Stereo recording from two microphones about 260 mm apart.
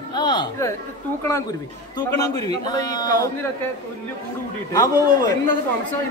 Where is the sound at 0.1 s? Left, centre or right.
Centre.